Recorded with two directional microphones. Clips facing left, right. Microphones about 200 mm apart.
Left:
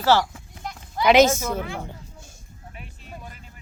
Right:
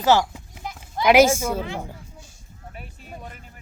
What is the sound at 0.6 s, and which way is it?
Speech, 5° right (ahead or behind).